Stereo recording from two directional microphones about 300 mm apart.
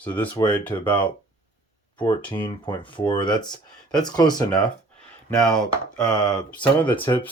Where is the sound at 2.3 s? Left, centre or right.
Centre.